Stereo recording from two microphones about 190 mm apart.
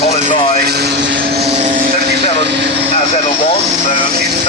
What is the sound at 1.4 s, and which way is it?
Vehicle, 35° right (ahead or behind).